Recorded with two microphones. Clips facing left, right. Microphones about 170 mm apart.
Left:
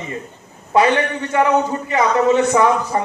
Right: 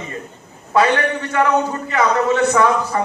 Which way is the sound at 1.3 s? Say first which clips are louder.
Left 2 dB; 20° left (ahead or behind).